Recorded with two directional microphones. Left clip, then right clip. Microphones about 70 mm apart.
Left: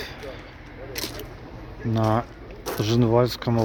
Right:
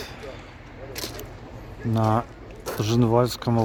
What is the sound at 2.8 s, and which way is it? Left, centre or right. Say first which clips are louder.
Speech: left 1 dB; right.